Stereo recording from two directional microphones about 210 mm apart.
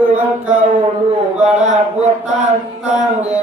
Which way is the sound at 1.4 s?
35° right (ahead or behind).